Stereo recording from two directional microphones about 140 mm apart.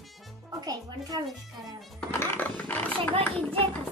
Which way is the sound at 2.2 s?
10° left (ahead or behind).